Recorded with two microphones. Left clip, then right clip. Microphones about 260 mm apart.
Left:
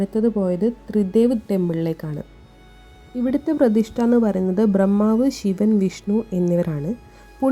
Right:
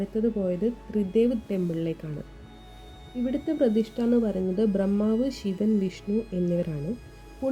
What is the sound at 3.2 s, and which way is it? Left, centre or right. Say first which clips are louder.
A woman's voice: left 6 dB; left.